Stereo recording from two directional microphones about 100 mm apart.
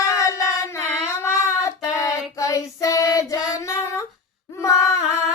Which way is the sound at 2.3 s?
35° left (ahead or behind).